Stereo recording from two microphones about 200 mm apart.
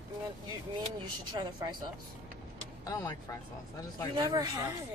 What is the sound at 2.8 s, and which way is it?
Speech, 15° left (ahead or behind).